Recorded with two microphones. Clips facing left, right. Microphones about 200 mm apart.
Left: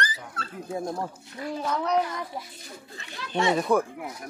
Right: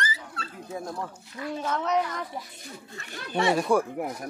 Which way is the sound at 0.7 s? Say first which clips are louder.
Left 4 dB; 25° left (ahead or behind).